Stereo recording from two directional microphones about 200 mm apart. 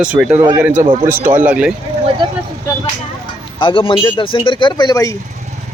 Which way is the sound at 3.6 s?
25° left (ahead or behind).